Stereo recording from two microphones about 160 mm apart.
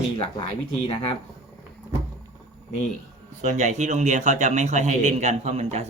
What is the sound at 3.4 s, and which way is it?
Speech, 50° right (ahead or behind).